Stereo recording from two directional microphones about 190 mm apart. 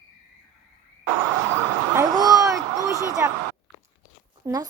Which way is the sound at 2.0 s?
20° right (ahead or behind).